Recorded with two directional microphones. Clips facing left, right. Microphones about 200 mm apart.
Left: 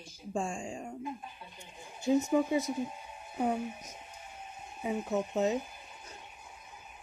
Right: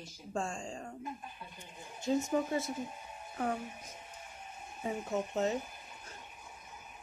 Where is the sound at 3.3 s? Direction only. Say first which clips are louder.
Left 4 dB; 15° left (ahead or behind).